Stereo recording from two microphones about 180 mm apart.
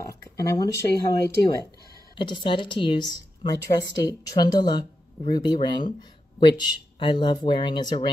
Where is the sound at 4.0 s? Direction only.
20° left (ahead or behind).